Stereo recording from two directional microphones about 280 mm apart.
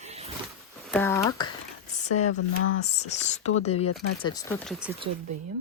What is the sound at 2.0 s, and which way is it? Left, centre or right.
Speech, left.